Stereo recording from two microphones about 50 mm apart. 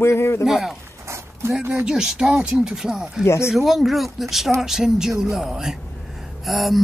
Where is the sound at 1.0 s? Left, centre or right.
Right.